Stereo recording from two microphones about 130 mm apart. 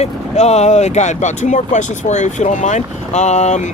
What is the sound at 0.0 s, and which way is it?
Speech, 60° left (ahead or behind).